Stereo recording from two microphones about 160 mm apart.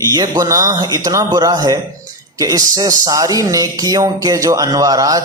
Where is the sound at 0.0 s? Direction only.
25° right (ahead or behind).